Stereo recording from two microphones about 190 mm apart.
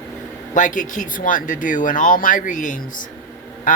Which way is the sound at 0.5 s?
45° left (ahead or behind).